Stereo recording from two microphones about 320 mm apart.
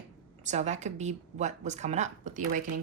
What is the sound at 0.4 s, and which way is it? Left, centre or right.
Speech, right.